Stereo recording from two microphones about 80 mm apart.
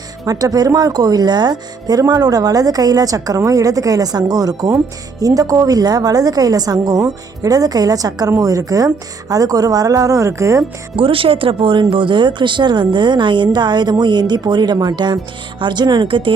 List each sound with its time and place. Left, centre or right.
0.3 s speech: right
11.0 s speech: right